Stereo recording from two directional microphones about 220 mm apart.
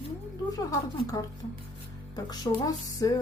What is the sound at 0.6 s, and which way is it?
A woman's voice, 15° left (ahead or behind).